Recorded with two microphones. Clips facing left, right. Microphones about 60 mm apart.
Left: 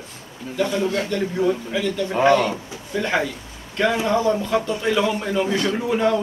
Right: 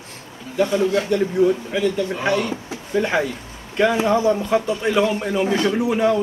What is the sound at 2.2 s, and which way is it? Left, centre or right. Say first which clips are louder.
Speech: left 6 dB; left.